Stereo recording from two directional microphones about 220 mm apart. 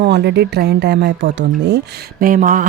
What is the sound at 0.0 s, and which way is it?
Speech, 50° right (ahead or behind).